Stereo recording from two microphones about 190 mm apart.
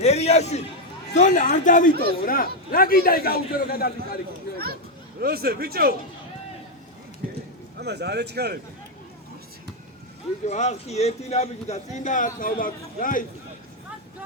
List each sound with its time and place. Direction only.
0.0 s a sound: 35° left (ahead or behind)
1.1 s a man's voice: 40° left (ahead or behind)
5.2 s speech: 55° right (ahead or behind)
7.8 s speech: 60° right (ahead or behind)
10.4 s speech: 35° left (ahead or behind)